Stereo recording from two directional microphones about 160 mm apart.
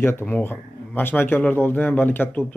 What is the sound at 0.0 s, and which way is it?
Speech, 15° left (ahead or behind).